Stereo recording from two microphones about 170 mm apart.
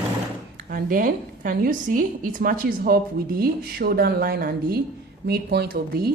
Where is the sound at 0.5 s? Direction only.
55° right (ahead or behind).